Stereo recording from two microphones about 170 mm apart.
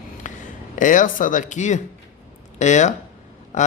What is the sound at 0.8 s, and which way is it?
Speech, 50° left (ahead or behind).